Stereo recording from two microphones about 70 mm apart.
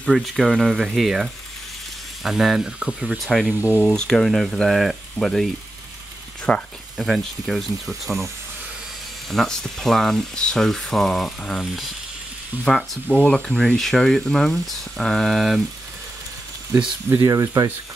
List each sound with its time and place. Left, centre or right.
0.0 s speech: centre
3.3 s speech: centre
6.5 s speech: centre
7.0 s speech: centre
9.3 s speech: centre
17.3 s speech: right